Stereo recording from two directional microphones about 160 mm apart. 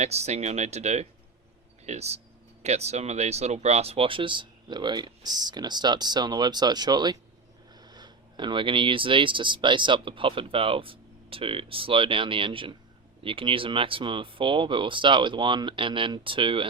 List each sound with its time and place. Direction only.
0.0 s speech: 45° right (ahead or behind)